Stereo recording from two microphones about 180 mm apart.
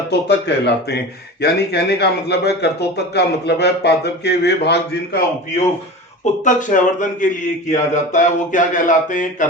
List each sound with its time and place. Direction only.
0.1 s speech: 70° left (ahead or behind)
6.4 s speech: 45° left (ahead or behind)